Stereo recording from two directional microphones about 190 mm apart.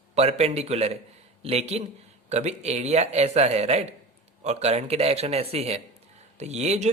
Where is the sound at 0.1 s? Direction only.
35° right (ahead or behind).